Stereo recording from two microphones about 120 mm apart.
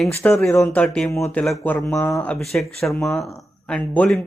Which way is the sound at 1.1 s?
25° left (ahead or behind).